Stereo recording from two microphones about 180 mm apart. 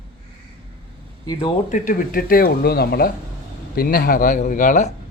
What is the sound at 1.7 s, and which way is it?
A man's voice, 45° left (ahead or behind).